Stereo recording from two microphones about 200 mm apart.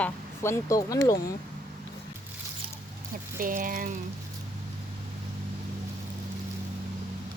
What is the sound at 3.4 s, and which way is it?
Speech, 45° right (ahead or behind).